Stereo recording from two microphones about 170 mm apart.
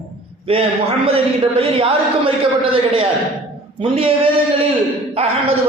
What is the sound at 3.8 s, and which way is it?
A man's voice, 30° right (ahead or behind).